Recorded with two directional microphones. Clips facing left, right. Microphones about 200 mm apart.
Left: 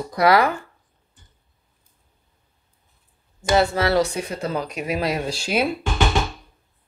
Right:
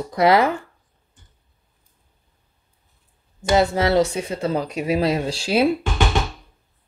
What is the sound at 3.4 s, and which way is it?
Speech, 20° right (ahead or behind).